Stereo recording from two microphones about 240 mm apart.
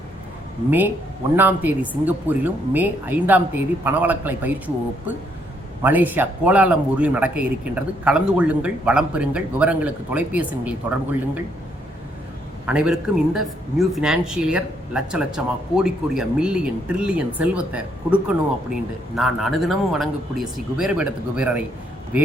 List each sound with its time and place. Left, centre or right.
1.4 s a woman's voice: centre
5.8 s speech: centre
12.6 s speech: centre